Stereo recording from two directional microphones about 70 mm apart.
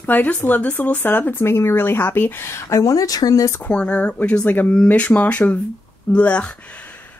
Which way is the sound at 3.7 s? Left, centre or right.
Centre.